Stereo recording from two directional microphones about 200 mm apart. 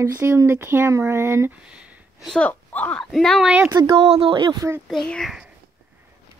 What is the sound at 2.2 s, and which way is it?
Speech, 5° left (ahead or behind).